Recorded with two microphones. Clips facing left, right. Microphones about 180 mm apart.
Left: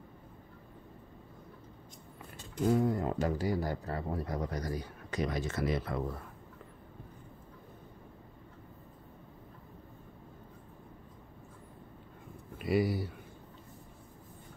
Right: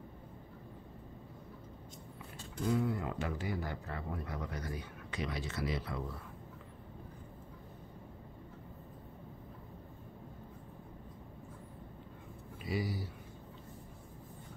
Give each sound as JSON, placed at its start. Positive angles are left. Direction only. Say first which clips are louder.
{"t": 2.7, "sound": "speech", "louder": "left 4 dB", "side_deg": 40}
{"t": 12.5, "sound": "speech", "louder": "left 8 dB", "side_deg": 60}